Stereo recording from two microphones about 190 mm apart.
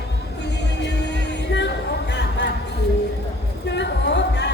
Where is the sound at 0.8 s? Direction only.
65° left (ahead or behind).